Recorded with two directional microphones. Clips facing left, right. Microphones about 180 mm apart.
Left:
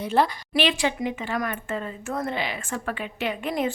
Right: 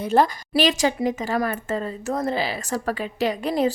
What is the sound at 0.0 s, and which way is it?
A woman's voice, 45° right (ahead or behind).